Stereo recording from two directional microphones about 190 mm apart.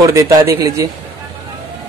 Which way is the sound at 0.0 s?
15° right (ahead or behind).